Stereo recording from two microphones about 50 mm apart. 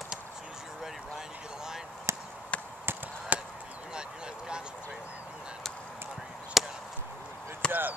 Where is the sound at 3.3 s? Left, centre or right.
Right.